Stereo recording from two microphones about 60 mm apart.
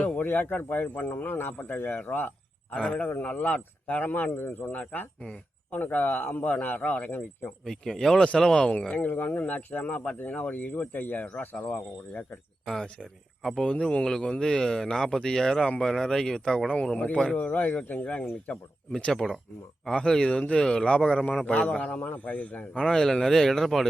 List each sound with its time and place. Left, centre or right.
0.2 s a man's voice: left
2.7 s a man's voice: centre; by 4.7 s left
4.7 s speech: left
7.6 s speech: centre
12.6 s speech: centre
13.7 s speech: centre
17.3 s speech: left
22.7 s speech: centre